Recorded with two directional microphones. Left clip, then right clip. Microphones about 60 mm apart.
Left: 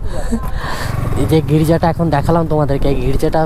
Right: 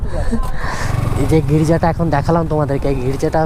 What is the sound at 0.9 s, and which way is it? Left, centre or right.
Roaring cats, right.